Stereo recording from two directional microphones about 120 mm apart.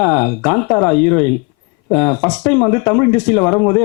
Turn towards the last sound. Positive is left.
turn(degrees=15)  # may be behind; listen again after turning